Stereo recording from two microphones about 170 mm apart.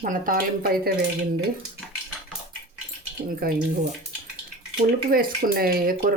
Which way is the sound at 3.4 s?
60° right (ahead or behind).